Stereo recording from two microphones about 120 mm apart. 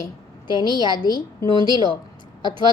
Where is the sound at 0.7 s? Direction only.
35° right (ahead or behind).